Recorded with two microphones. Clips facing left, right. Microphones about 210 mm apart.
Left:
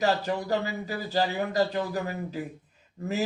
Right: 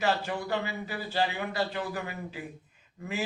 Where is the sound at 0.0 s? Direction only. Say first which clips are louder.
Left 3 dB; 40° left (ahead or behind).